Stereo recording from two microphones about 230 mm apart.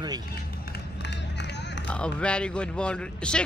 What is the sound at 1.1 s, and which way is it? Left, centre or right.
Run, left.